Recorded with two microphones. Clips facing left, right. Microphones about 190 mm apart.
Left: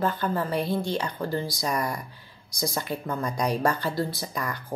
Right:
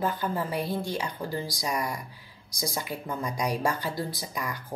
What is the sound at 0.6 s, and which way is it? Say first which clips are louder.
Speech: left 3 dB; 20° left (ahead or behind).